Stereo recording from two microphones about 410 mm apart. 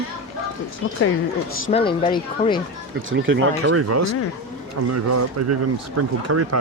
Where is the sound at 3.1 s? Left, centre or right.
Right.